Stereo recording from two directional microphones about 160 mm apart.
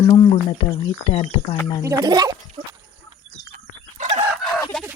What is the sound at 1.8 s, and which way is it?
Speech, 20° right (ahead or behind).